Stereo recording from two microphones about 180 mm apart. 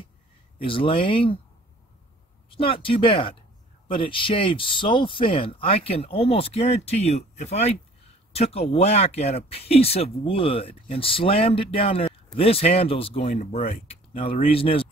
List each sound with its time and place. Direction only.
0.6 s speech: 30° left (ahead or behind)
2.5 s speech: 30° left (ahead or behind)